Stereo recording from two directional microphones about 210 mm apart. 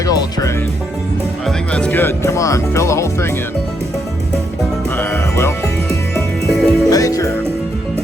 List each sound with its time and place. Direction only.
0.0 s music: 15° left (ahead or behind)
1.5 s music: 5° left (ahead or behind)
4.9 s music: 10° left (ahead or behind)
6.9 s music: 15° left (ahead or behind)